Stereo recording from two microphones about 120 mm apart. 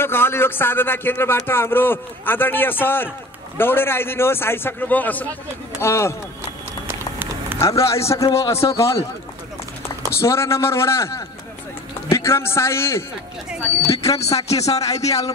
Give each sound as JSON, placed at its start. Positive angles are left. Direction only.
{"t": 0.0, "sound": "a man's voice", "side_deg": 20}
{"t": 6.9, "sound": "run", "side_deg": -20}
{"t": 7.5, "sound": "a man's voice", "side_deg": 25}
{"t": 10.1, "sound": "a man's voice", "side_deg": 25}
{"t": 14.1, "sound": "speech", "side_deg": 60}
{"t": 14.7, "sound": "a man's voice", "side_deg": 30}